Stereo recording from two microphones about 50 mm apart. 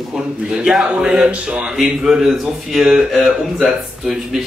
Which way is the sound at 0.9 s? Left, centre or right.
Centre.